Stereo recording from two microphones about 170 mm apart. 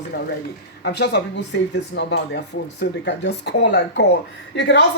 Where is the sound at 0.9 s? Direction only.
80° left.